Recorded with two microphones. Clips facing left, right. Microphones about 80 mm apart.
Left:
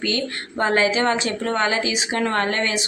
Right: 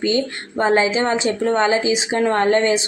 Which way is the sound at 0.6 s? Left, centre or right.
Right.